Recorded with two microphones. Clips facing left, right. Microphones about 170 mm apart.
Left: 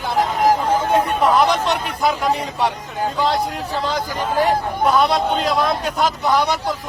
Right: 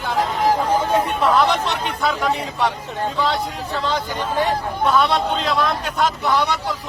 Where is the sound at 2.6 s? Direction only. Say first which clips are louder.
Left 1 dB; 10° left (ahead or behind).